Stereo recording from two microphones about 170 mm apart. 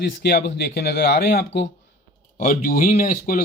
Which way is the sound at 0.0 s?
70° left (ahead or behind).